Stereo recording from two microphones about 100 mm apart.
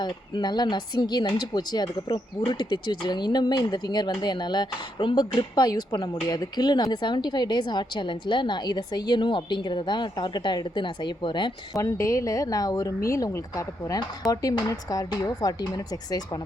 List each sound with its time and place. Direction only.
0.0 s speech: 45° left (ahead or behind)
11.8 s speech: 30° left (ahead or behind)